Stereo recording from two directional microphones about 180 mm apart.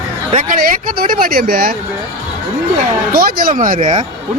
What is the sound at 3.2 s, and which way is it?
Speech, 55° right (ahead or behind).